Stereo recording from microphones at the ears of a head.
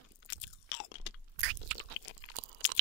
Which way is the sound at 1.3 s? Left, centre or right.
Right.